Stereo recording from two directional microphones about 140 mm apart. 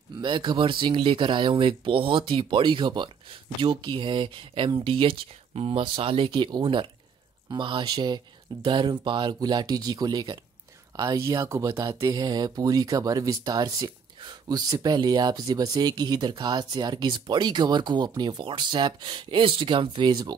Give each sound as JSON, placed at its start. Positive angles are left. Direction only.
{"t": 0.2, "sound": "speech", "side_deg": -35}